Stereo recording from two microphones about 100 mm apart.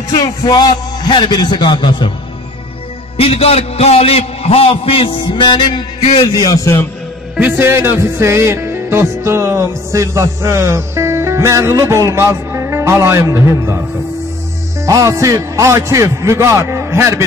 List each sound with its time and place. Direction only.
0.1 s a man's voice: 45° left (ahead or behind)
3.2 s a man's voice: 75° left (ahead or behind); by 6.0 s 50° left (ahead or behind)
6.3 s a man's voice: 40° left (ahead or behind)
7.3 s music: 20° right (ahead or behind)